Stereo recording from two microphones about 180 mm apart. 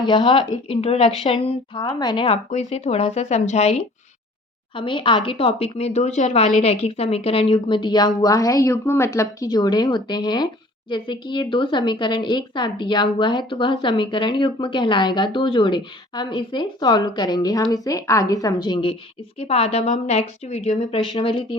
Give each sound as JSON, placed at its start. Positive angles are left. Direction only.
{"t": 0.0, "sound": "a woman's voice", "side_deg": 25}